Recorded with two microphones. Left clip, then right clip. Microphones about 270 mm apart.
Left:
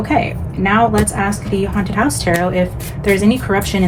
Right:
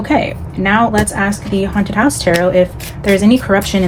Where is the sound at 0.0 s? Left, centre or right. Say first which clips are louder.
Right 2 dB; right.